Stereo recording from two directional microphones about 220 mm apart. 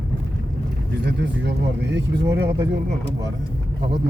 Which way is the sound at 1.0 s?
50° right (ahead or behind).